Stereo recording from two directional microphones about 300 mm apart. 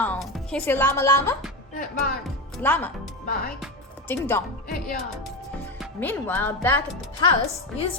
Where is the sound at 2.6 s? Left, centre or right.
Centre.